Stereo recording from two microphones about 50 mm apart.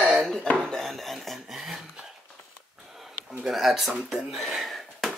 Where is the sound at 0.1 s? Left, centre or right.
Centre.